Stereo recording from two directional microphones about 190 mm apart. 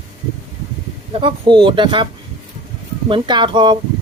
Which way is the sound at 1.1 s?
25° right (ahead or behind).